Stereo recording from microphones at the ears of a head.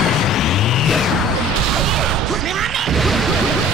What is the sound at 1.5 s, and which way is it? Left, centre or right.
Smash, right.